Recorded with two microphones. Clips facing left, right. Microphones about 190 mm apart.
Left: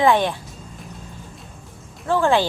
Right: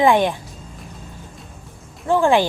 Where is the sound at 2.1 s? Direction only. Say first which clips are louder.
Right 2 dB; 15° right (ahead or behind).